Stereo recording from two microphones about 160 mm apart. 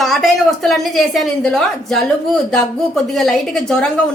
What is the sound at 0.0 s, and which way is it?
A woman's voice, centre (ahead or behind).